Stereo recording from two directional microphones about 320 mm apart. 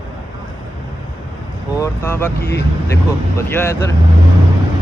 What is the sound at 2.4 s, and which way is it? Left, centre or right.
Speech, left.